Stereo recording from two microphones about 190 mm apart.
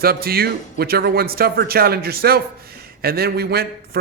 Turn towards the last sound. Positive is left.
turn(degrees=-55)  # may be behind; listen again after turning